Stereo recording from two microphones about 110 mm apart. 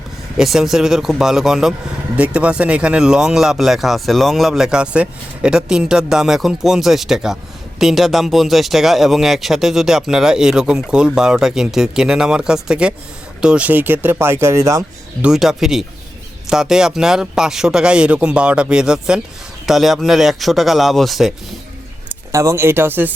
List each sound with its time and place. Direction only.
0.3 s speech: 5° right (ahead or behind); by 14.8 s 30° right (ahead or behind)
15.2 s speech: 5° right (ahead or behind)
22.1 s speech: 30° right (ahead or behind)